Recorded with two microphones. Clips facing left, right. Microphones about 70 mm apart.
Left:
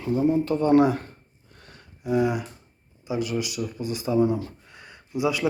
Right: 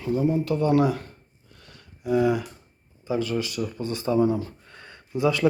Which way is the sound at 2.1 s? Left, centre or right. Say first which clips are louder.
Right 2 dB; centre.